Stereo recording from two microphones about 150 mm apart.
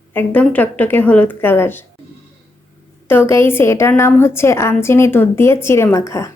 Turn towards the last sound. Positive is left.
turn(degrees=20)  # may be behind; listen again after turning